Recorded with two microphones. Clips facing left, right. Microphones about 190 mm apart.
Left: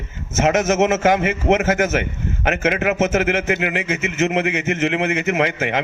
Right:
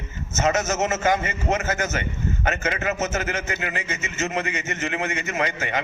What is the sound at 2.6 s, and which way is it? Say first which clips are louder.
A man's voice: left 11 dB; 80° left.